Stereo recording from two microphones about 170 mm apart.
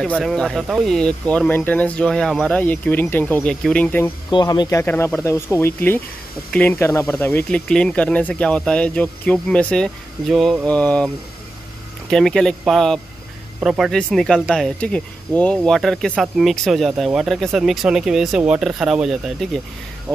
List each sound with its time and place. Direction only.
0.0 s speech: centre (ahead or behind)
4.3 s speech: 25° left (ahead or behind); by 11.1 s 10° left (ahead or behind)
12.1 s speech: centre (ahead or behind)